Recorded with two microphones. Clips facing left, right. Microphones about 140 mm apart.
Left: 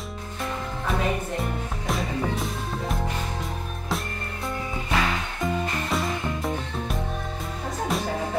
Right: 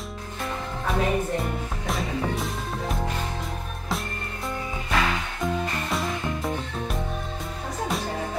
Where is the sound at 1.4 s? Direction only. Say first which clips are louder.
Even; centre (ahead or behind).